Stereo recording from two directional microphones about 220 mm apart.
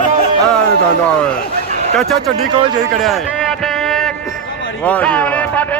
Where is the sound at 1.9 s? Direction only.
Centre (ahead or behind).